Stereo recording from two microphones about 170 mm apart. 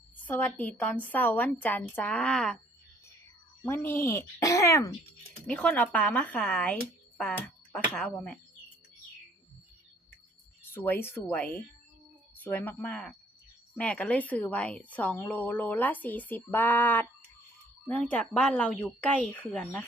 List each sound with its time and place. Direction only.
0.3 s a woman's voice: 10° left (ahead or behind)
3.6 s a woman's voice: 15° left (ahead or behind)
5.5 s a woman's voice: 5° left (ahead or behind)
10.8 s a woman's voice: 10° left (ahead or behind)